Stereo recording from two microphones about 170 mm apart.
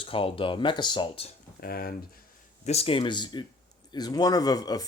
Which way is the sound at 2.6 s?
35° left (ahead or behind).